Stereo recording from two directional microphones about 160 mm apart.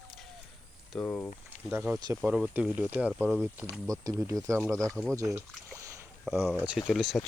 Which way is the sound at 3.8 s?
20° right (ahead or behind).